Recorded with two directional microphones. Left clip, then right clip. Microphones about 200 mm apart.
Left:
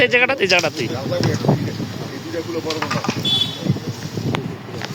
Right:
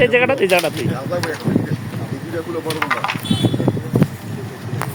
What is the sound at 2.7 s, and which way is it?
Speech, 25° right (ahead or behind).